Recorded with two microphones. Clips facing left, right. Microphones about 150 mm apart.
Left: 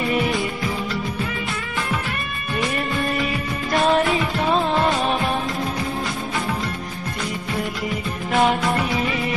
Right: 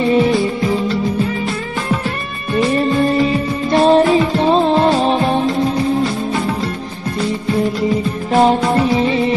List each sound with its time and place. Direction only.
0.0 s music: 30° right (ahead or behind)
2.5 s music: 30° right (ahead or behind)
7.9 s music: 35° right (ahead or behind)